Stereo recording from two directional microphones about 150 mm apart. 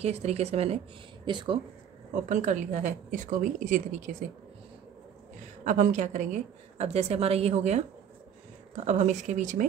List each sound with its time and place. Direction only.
0.0 s a woman's voice: 45° right (ahead or behind)
1.2 s speech: 30° right (ahead or behind)
2.2 s a woman's voice: 55° right (ahead or behind)
5.6 s a woman's voice: 55° right (ahead or behind)